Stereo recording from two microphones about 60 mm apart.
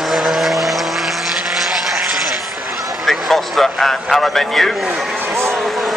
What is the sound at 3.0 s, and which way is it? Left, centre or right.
A man's voice, centre.